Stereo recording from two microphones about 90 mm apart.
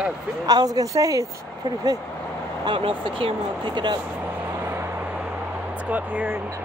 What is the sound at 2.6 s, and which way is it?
Speech, 75° right (ahead or behind).